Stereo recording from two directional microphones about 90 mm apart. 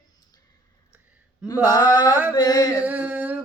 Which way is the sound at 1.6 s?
45° left (ahead or behind).